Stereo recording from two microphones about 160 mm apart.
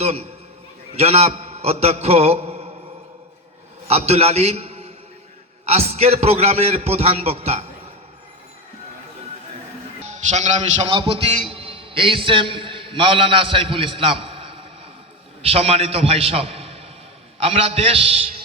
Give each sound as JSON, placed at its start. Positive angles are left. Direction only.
{"t": 0.0, "sound": "a man's voice", "side_deg": -40}
{"t": 3.8, "sound": "a man's voice", "side_deg": -40}
{"t": 10.1, "sound": "a man's voice", "side_deg": -45}
{"t": 10.8, "sound": "a man's voice", "side_deg": -35}